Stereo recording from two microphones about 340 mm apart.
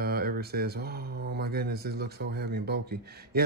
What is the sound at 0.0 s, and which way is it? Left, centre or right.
Speech, right.